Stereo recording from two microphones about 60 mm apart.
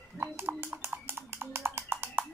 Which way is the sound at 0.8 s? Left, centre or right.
Right.